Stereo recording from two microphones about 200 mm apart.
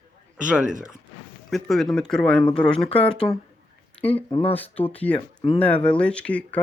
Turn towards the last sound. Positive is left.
turn(degrees=5)  # may be behind; listen again after turning